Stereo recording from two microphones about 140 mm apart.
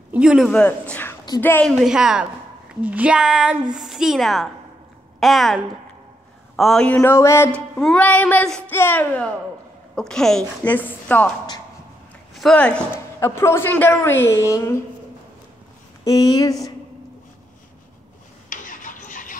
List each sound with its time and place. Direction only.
0.1 s speech: 5° right (ahead or behind)
0.5 s a woman's voice: 10° left (ahead or behind)
7.0 s a woman's voice: 20° left (ahead or behind)
12.4 s a woman's voice: 5° left (ahead or behind); by 14.8 s 20° left (ahead or behind)
16.0 s speech: 25° left (ahead or behind)
18.5 s a sound: 70° left (ahead or behind)